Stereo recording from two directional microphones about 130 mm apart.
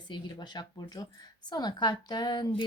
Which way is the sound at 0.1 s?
35° left (ahead or behind).